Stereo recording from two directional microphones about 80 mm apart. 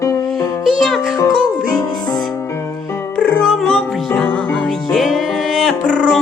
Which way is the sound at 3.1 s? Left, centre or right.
Centre.